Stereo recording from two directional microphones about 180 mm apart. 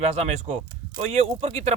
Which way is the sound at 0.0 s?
35° right (ahead or behind).